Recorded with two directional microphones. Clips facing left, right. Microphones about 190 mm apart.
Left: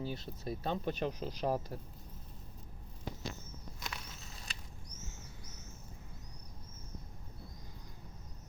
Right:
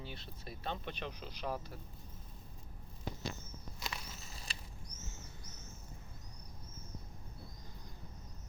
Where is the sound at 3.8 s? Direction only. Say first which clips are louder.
Right 1 dB; centre (ahead or behind).